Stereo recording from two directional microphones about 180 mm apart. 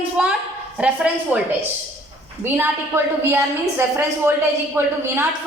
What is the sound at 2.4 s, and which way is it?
A woman's voice, 10° right (ahead or behind).